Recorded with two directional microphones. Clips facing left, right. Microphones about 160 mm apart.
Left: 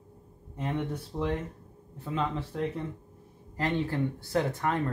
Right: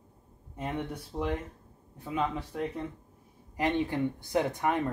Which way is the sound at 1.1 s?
10° right (ahead or behind).